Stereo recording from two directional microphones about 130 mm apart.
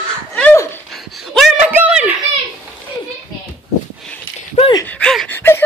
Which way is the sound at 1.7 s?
10° right (ahead or behind).